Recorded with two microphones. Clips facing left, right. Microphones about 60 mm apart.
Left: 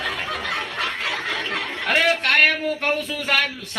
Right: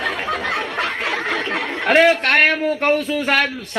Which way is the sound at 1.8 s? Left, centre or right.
Right.